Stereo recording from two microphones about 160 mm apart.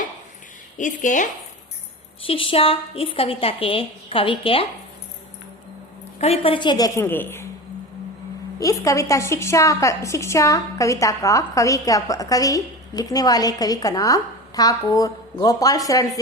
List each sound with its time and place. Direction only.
0.8 s speech: 55° left (ahead or behind)
2.2 s a woman's voice: 35° left (ahead or behind)
6.1 s a woman's voice: 40° left (ahead or behind); by 7.4 s 15° left (ahead or behind)
8.5 s a woman's voice: 20° left (ahead or behind)